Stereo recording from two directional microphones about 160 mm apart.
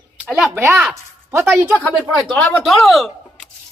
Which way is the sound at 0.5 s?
10° right (ahead or behind).